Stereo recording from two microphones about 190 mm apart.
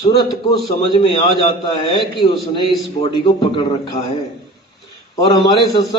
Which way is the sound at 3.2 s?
25° left (ahead or behind).